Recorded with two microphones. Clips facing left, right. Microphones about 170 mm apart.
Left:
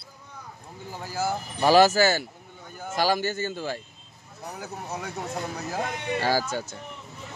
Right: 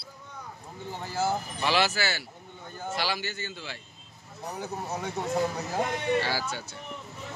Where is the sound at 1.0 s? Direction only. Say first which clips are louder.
Even; 10° left (ahead or behind).